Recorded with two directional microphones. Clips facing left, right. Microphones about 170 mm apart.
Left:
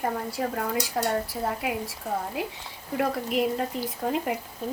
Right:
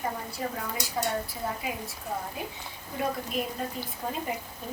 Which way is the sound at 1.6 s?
75° left (ahead or behind).